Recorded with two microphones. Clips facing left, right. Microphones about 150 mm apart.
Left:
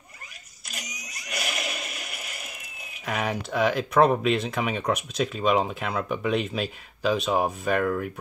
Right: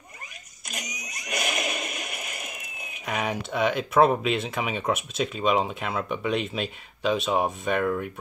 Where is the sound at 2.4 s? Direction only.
Centre (ahead or behind).